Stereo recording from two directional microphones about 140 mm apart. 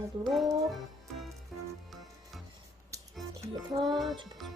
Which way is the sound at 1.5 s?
Centre (ahead or behind).